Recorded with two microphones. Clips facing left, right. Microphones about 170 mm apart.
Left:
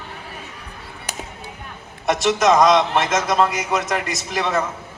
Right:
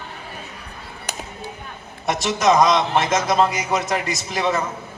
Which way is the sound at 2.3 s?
75° left (ahead or behind).